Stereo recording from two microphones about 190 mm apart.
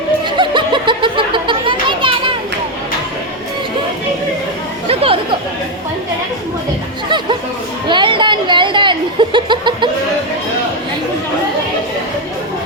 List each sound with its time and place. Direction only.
0.3 s a sound: 25° right (ahead or behind)
4.9 s chatter: 30° right (ahead or behind)
7.9 s snicker: 25° right (ahead or behind)